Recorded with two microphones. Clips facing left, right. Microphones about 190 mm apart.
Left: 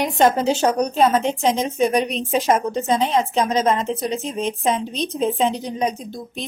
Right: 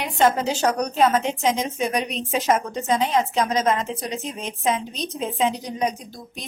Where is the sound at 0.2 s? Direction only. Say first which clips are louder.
Left 2 dB; 30° left (ahead or behind).